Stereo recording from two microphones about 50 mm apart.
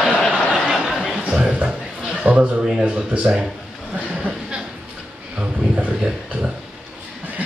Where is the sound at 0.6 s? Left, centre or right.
Centre.